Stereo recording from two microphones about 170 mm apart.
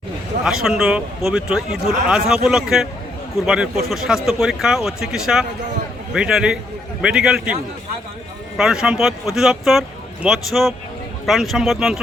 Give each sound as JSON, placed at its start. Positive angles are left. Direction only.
{"t": 0.4, "sound": "a man's voice", "side_deg": -5}
{"t": 8.5, "sound": "a man's voice", "side_deg": -5}